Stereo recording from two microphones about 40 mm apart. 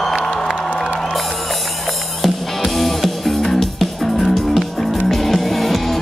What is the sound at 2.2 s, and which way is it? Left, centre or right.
Music, centre.